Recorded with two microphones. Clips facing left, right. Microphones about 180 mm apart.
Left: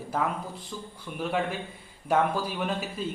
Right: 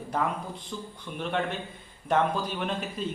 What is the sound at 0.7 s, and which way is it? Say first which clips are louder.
A man's voice: right 1 dB; 5° left (ahead or behind).